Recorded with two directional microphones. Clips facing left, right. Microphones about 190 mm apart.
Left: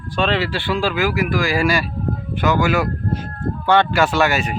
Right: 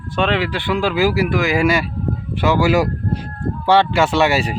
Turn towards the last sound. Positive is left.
turn(degrees=-30)  # may be behind; listen again after turning